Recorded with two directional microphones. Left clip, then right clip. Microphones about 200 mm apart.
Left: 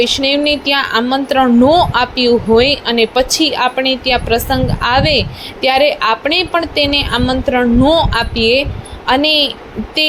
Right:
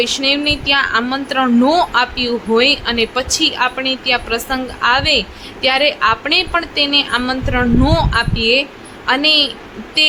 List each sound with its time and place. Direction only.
0.0 s a woman's voice: 15° left (ahead or behind)